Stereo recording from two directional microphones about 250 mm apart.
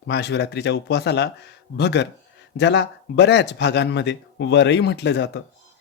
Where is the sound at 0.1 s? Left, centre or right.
Left.